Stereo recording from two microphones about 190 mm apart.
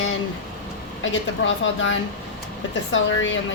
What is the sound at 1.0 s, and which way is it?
A woman's voice, 90° left.